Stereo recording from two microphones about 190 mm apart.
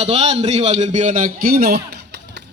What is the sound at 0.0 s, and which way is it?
A man's voice, 35° right (ahead or behind).